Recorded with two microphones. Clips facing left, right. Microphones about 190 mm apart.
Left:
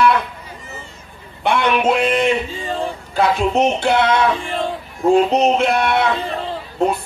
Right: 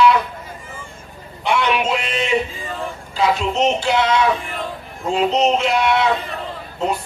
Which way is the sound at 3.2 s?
55° left (ahead or behind).